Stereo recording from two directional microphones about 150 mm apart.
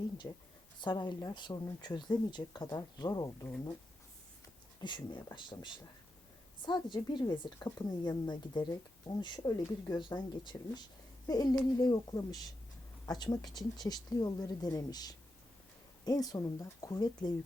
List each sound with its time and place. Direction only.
0.2 s a woman's voice: 20° left (ahead or behind)
4.8 s a woman's voice: 30° left (ahead or behind)